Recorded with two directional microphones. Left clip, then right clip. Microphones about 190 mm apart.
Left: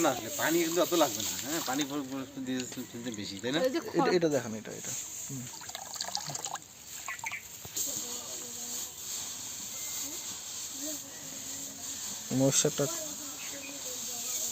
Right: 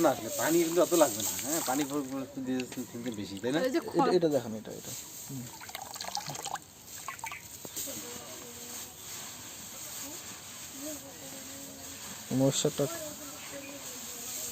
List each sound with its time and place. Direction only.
0.0 s speech: 10° right (ahead or behind)
3.6 s speech: 20° right (ahead or behind)
4.1 s speech: 5° left (ahead or behind)
6.0 s water: 20° right (ahead or behind)
12.3 s speech: 5° right (ahead or behind)